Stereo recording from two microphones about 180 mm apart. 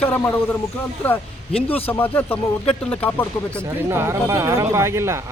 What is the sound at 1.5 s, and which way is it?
Speech, 30° left (ahead or behind).